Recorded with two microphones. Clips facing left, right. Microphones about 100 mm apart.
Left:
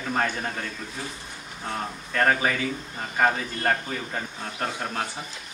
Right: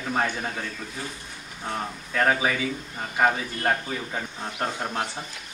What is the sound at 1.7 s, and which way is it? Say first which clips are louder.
A man's voice: even; 5° right (ahead or behind).